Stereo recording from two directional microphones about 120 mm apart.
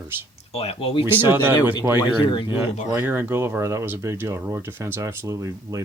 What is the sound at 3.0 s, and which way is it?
Speech, 15° right (ahead or behind).